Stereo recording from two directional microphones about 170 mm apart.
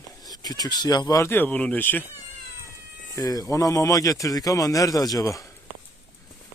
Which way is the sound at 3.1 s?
20° left (ahead or behind).